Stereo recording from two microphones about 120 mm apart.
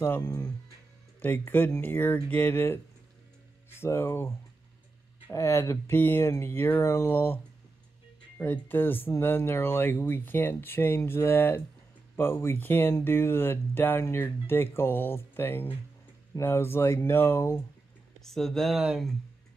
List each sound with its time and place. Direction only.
0.0 s speech: 20° left (ahead or behind)
5.3 s speech: 25° left (ahead or behind)
8.4 s speech: 15° left (ahead or behind)
18.2 s speech: 5° left (ahead or behind)